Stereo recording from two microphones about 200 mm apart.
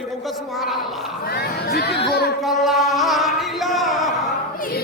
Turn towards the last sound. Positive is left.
turn(degrees=0)  # may be behind; listen again after turning